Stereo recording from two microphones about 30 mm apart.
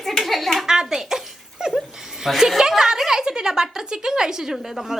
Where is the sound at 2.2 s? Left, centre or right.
Centre.